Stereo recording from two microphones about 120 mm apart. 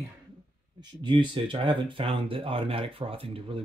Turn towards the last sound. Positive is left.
turn(degrees=-50)  # may be behind; listen again after turning